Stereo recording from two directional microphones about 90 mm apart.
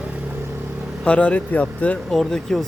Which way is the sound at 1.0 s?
15° left (ahead or behind).